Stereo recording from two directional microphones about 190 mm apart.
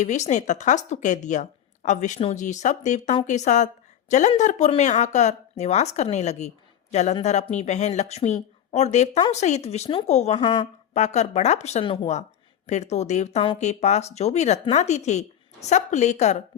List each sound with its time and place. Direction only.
0.0 s a woman's voice: 40° left (ahead or behind)